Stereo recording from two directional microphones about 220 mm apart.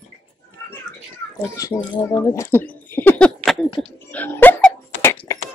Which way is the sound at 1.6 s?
15° left (ahead or behind).